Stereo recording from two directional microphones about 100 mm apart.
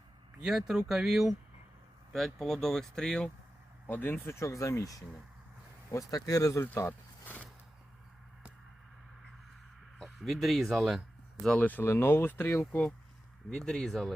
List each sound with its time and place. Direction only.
0.4 s speech: 5° right (ahead or behind)
3.8 s speech: 20° left (ahead or behind)
10.0 s speech: centre (ahead or behind)
11.4 s speech: 15° left (ahead or behind)
13.5 s speech: 5° left (ahead or behind)